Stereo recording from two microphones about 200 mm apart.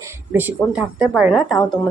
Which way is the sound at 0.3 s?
5° right (ahead or behind).